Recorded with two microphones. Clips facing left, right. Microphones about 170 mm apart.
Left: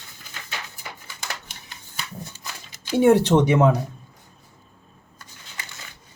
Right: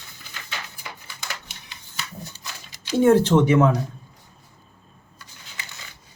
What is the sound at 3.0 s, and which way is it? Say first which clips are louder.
Speech: even; 15° left (ahead or behind).